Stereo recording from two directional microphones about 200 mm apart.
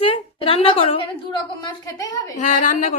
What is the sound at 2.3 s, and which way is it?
Speech, 40° left (ahead or behind).